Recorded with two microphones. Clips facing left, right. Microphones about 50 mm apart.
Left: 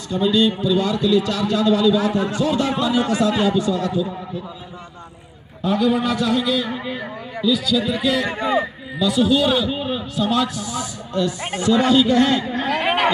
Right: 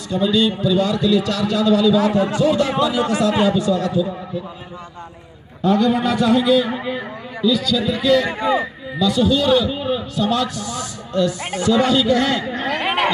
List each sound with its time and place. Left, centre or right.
0.1 s a man's voice: left
2.0 s speech: right
3.5 s a man's voice: left
5.6 s a man's voice: centre
7.4 s a man's voice: centre; by 12.4 s left
12.5 s a man's voice: centre